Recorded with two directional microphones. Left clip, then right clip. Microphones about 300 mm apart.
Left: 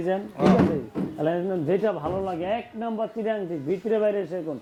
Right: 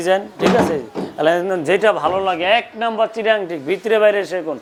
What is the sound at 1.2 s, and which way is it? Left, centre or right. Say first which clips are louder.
A man's voice: right 10 dB; centre.